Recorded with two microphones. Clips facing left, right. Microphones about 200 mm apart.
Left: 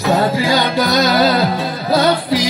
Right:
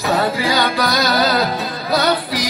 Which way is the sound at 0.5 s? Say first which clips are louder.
Left 3 dB; 20° left (ahead or behind).